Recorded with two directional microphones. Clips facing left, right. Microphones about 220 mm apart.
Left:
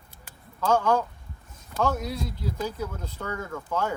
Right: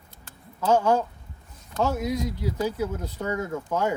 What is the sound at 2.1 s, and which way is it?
Speech, 10° right (ahead or behind).